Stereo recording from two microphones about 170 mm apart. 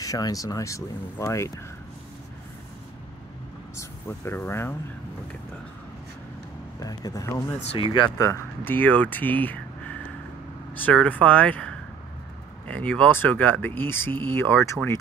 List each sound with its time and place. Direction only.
0.0 s speech: 20° left (ahead or behind)
3.7 s speech: 15° left (ahead or behind)
6.8 s speech: 20° left (ahead or behind)